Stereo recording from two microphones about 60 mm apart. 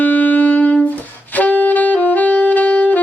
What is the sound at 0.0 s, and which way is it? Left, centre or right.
Music, left.